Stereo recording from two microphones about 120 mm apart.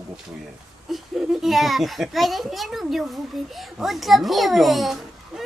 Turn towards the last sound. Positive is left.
turn(degrees=0)  # may be behind; listen again after turning